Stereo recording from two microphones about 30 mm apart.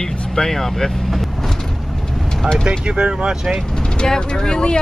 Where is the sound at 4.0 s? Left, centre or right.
Left.